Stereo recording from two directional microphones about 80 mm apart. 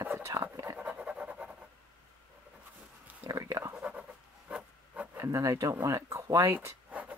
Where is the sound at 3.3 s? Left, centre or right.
Right.